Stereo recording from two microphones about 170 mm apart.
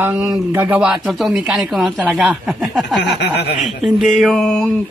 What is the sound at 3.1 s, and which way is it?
Snicker, 75° left (ahead or behind).